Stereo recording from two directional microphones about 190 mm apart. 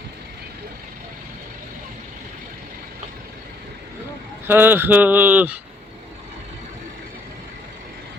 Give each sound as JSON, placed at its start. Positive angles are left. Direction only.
{"t": 4.4, "sound": "speech", "side_deg": -10}